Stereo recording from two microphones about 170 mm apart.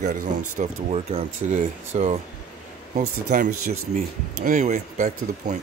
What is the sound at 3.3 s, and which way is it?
Speech, 50° right (ahead or behind).